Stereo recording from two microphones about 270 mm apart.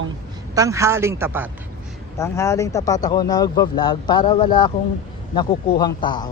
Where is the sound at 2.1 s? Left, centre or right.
Centre.